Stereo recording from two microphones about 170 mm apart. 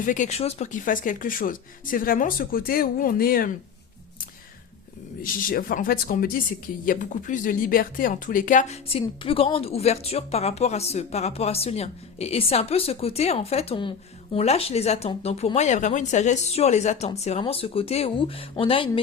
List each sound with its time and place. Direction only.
0.0 s speech: 50° left (ahead or behind)
5.2 s speech: 55° left (ahead or behind); by 18.9 s 30° left (ahead or behind)